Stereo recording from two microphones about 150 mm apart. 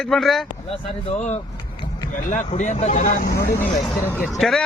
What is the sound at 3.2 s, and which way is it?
Speech, 85° left.